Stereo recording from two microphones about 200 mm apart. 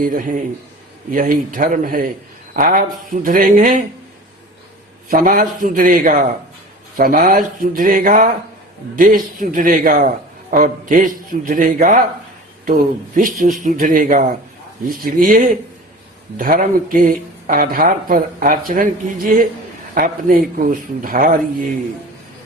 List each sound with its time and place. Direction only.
0.0 s a man's voice: 40° right (ahead or behind)
5.0 s a man's voice: 45° right (ahead or behind)